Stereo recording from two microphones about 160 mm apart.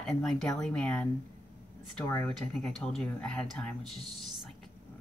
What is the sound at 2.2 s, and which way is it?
A woman's voice, 5° left (ahead or behind).